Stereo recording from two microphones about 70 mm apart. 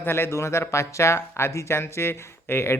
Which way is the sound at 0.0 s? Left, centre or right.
Left.